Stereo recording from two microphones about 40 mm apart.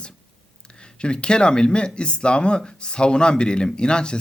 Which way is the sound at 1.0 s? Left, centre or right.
Left.